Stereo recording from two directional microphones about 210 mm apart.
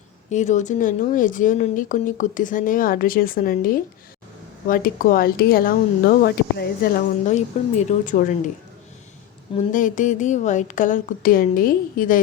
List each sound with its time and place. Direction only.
0.3 s speech: 35° left (ahead or behind)
7.3 s speech: 35° left (ahead or behind)
9.6 s speech: 35° left (ahead or behind)